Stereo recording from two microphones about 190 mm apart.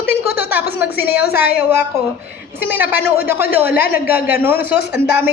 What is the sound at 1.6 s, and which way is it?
A woman's voice, 10° right (ahead or behind).